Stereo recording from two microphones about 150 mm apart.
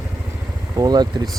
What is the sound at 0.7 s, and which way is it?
Speech, 25° right (ahead or behind).